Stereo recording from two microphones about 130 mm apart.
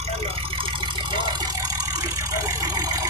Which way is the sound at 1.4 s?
30° right (ahead or behind).